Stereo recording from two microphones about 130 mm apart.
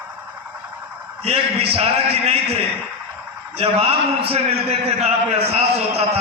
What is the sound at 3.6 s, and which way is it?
A man's voice, 50° right (ahead or behind).